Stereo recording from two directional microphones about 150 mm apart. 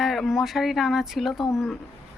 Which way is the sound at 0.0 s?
Centre (ahead or behind).